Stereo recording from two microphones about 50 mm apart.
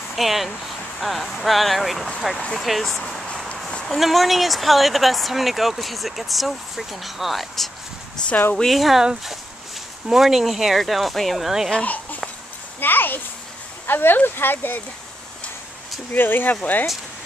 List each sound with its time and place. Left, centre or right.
0.1 s speech: centre
8.2 s a sound: centre
8.6 s speech: centre
10.0 s speech: centre
11.8 s a child's voice: left
16.1 s speech: left